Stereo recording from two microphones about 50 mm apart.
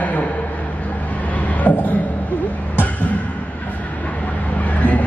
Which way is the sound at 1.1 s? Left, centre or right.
Left.